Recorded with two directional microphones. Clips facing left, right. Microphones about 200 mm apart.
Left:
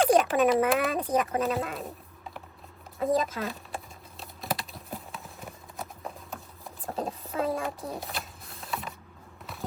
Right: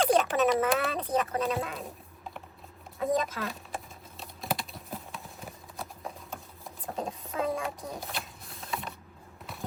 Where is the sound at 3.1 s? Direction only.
35° left (ahead or behind).